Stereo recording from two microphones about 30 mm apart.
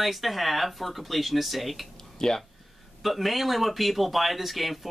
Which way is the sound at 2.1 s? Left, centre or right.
Centre.